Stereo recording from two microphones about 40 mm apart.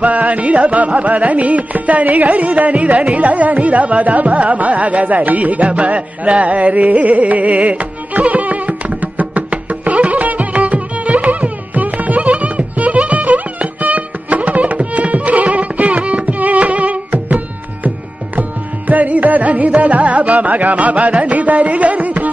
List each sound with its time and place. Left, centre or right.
0.0 s carnatic music: right
18.9 s carnatic music: right